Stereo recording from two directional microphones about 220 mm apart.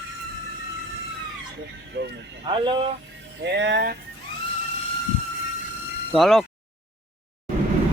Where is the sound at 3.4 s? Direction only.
50° right (ahead or behind).